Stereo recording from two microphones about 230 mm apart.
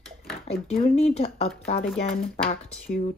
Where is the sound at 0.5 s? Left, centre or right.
Left.